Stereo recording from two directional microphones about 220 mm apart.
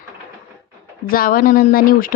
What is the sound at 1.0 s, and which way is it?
A woman's voice, 40° left (ahead or behind).